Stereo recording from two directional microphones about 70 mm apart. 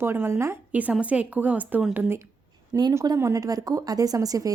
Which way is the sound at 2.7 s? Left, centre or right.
Right.